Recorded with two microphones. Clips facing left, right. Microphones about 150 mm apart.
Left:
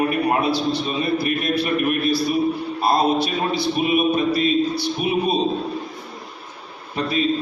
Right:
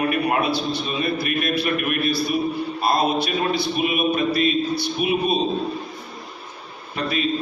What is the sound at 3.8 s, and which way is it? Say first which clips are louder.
A man's voice: left 3 dB; 25° left (ahead or behind).